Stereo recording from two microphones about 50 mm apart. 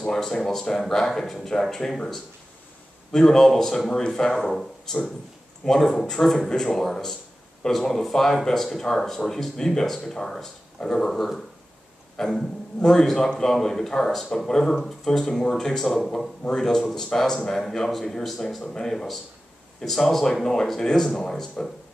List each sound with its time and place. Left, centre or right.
0.0 s a man's voice: centre
5.7 s a man's voice: centre